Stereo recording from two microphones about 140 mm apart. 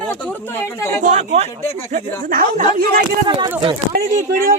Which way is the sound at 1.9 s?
75° right (ahead or behind).